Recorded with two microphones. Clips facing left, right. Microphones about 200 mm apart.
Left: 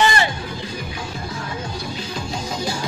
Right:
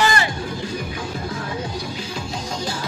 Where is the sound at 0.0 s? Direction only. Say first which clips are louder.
Left 1 dB; 25° left (ahead or behind).